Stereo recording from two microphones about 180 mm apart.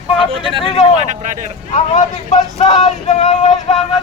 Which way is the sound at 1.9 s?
40° left (ahead or behind).